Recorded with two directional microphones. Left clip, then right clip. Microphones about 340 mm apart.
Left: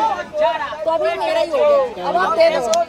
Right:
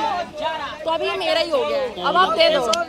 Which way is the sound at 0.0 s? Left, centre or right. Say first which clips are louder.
Left 6 dB; centre.